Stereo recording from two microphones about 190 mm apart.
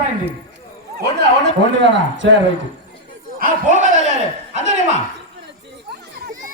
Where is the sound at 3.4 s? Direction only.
45° right (ahead or behind).